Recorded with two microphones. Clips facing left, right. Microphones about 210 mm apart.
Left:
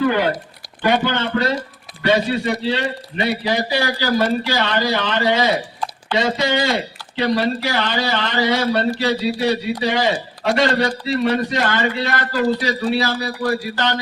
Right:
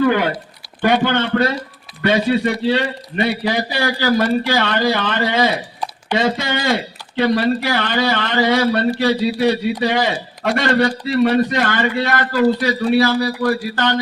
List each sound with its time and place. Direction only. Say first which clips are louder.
0.0 s speech: right 2 dB; 55° right (ahead or behind)